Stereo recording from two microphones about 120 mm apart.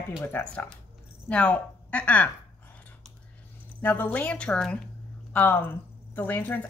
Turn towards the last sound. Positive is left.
turn(degrees=15)  # may be behind; listen again after turning